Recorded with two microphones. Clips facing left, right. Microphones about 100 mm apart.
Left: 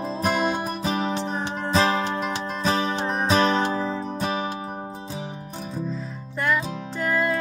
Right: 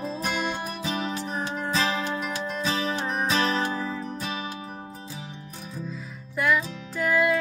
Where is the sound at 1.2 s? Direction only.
25° left (ahead or behind).